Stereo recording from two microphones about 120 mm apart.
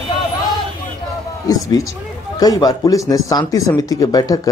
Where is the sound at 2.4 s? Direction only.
30° left (ahead or behind).